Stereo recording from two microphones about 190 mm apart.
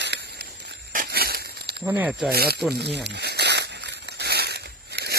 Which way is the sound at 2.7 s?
60° right (ahead or behind).